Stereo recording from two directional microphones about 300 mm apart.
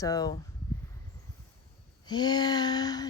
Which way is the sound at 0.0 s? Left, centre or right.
Centre.